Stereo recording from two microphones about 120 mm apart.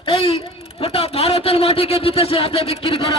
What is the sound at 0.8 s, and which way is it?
A man's voice, 50° left (ahead or behind).